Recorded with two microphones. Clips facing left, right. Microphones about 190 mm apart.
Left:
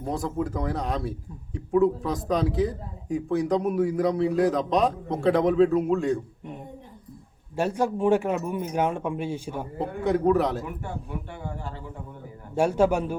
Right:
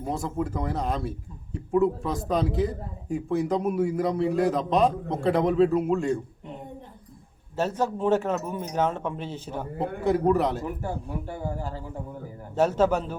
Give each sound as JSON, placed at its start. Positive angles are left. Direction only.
{"t": 0.0, "sound": "speech", "side_deg": 0}
{"t": 7.5, "sound": "speech", "side_deg": 15}
{"t": 10.0, "sound": "speech", "side_deg": 0}
{"t": 10.8, "sound": "a man's voice", "side_deg": -35}
{"t": 12.5, "sound": "speech", "side_deg": 10}